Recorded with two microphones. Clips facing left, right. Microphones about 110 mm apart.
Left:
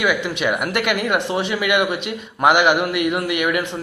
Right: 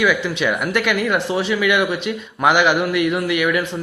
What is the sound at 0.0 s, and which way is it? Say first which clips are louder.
Speech: right 2 dB; 15° left (ahead or behind).